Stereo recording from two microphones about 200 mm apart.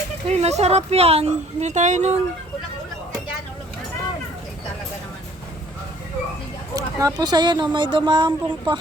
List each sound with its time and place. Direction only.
0.3 s speech: 35° right (ahead or behind)
6.7 s speech: 20° right (ahead or behind)